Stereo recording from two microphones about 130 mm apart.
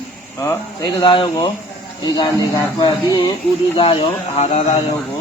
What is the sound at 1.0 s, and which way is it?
Speech, 40° left (ahead or behind).